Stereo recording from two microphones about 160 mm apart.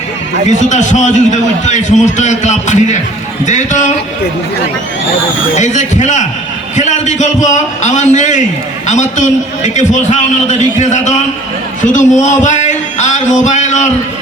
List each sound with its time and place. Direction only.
0.7 s a man's voice: 50° left (ahead or behind)
5.5 s a man's voice: 50° left (ahead or behind)